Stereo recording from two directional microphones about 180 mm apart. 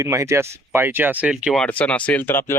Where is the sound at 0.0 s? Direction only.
15° right (ahead or behind).